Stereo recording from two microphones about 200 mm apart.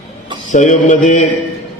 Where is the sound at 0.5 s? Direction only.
40° left (ahead or behind).